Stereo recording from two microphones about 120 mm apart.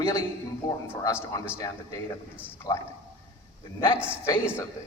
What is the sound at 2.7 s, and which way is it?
Speech, 35° left (ahead or behind).